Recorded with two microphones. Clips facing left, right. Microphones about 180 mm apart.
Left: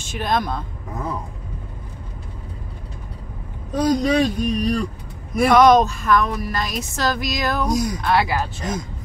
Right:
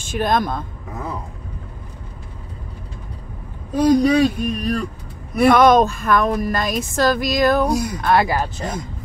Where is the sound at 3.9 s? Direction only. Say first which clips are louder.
Right 4 dB; 10° right (ahead or behind).